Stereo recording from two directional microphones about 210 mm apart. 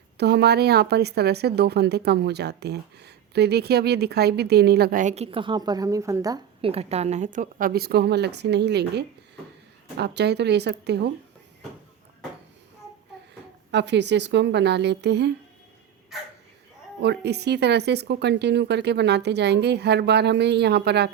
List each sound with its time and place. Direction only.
0.2 s speech: 50° right (ahead or behind); by 6.7 s 15° right (ahead or behind)
6.7 s speech: 30° right (ahead or behind); by 11.1 s 50° right (ahead or behind)
13.7 s a woman's voice: 55° right (ahead or behind)
16.1 s speech: centre (ahead or behind)
17.0 s speech: 50° right (ahead or behind)